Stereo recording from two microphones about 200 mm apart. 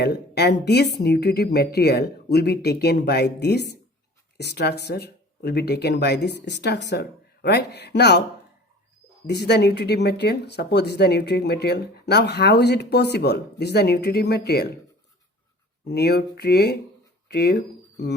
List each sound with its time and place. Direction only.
0.0 s speech: 55° left (ahead or behind)
9.2 s speech: 55° left (ahead or behind)
15.9 s speech: 55° left (ahead or behind)